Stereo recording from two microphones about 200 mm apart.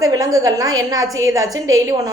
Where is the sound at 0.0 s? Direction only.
20° right (ahead or behind).